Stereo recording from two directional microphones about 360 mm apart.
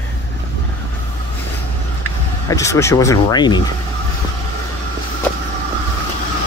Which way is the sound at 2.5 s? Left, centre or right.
Centre.